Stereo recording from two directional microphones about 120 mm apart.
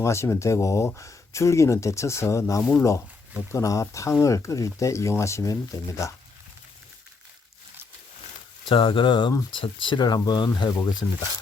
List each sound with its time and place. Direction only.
0.0 s speech: 20° left (ahead or behind)
8.7 s speech: 45° left (ahead or behind)